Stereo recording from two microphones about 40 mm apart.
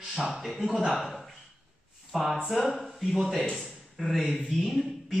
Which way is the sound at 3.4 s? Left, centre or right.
Centre.